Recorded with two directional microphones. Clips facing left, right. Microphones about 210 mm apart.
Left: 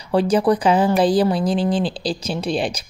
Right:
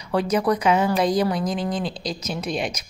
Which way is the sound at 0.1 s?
30° left (ahead or behind).